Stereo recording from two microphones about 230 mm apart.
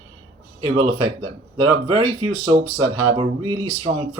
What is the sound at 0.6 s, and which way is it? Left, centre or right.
Speech, right.